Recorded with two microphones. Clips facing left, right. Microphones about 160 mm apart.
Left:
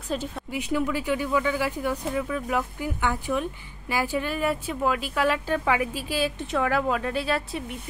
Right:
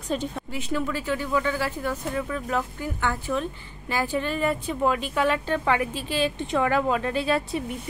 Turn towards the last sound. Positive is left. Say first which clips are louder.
# right 3 dB
turn(degrees=0)  # may be behind; listen again after turning